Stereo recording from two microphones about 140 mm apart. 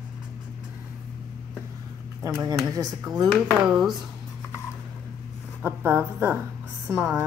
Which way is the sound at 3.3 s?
Centre (ahead or behind).